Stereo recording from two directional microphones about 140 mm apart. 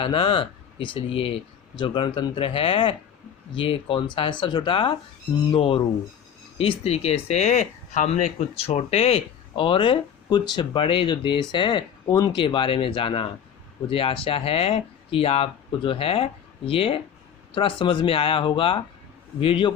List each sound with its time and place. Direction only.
0.0 s speech: 40° left (ahead or behind)